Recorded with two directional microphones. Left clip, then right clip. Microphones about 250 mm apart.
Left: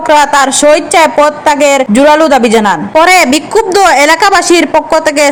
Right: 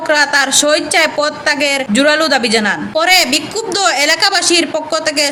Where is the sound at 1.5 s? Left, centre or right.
Left.